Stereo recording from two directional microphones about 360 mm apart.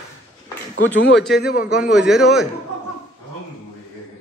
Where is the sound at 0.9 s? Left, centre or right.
Left.